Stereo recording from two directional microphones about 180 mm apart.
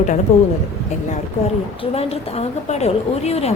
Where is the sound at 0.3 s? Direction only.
35° left (ahead or behind).